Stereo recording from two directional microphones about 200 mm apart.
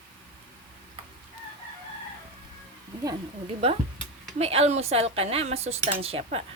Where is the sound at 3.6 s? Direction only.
30° right (ahead or behind).